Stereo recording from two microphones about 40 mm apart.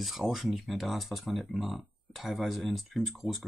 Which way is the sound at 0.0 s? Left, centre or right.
Centre.